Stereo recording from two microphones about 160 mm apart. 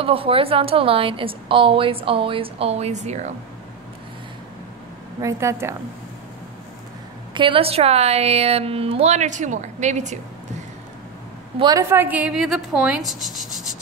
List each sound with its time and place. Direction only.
0.0 s a woman's voice: 35° right (ahead or behind)
5.2 s a woman's voice: 15° right (ahead or behind)
7.3 s a woman's voice: 30° right (ahead or behind)
11.5 s a woman's voice: 25° right (ahead or behind)
11.9 s speech: 10° right (ahead or behind)